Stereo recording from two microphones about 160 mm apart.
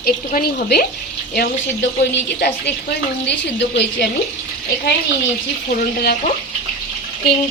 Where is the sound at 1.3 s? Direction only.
85° left.